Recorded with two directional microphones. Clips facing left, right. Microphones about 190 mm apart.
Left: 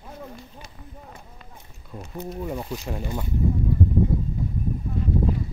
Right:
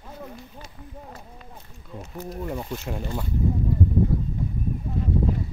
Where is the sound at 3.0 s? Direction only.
10° left (ahead or behind).